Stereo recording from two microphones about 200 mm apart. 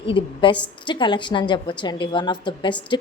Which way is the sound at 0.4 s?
25° left (ahead or behind).